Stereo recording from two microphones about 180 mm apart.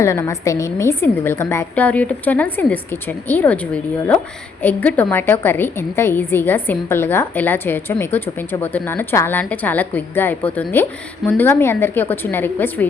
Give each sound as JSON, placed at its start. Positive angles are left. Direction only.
{"t": 0.0, "sound": "a woman's voice", "side_deg": 15}